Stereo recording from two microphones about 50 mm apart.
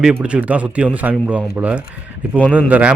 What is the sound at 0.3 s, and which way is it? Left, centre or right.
A man's voice, right.